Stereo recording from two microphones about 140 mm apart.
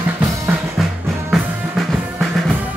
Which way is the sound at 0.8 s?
Centre (ahead or behind).